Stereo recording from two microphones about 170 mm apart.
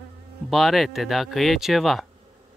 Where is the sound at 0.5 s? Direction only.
Centre (ahead or behind).